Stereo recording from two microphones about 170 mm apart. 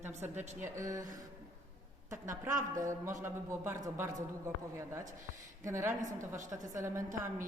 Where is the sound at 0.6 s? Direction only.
20° right (ahead or behind).